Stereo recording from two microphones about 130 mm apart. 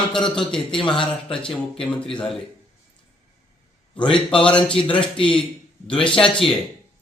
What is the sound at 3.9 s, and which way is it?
Speech, 40° left (ahead or behind).